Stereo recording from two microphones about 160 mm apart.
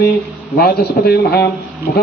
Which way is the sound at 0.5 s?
75° left (ahead or behind).